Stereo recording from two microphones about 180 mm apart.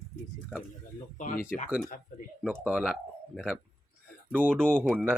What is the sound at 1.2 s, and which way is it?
Speech, 45° left (ahead or behind).